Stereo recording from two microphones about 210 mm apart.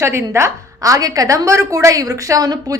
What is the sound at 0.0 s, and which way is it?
A woman's voice, 10° right (ahead or behind).